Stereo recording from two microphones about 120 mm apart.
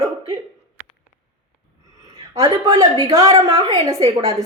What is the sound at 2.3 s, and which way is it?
A woman's voice, 30° right (ahead or behind).